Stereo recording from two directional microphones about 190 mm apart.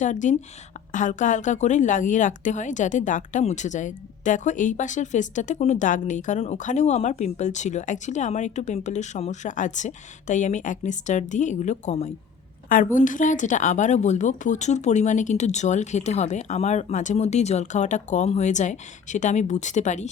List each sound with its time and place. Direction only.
0.0 s a woman's voice: 40° left (ahead or behind)